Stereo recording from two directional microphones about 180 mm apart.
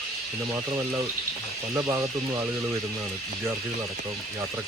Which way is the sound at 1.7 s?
15° right (ahead or behind).